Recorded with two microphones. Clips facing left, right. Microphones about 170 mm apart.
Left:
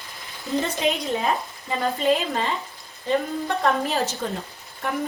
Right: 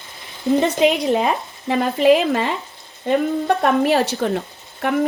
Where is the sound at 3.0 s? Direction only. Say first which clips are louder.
Right 6 dB; 70° right (ahead or behind).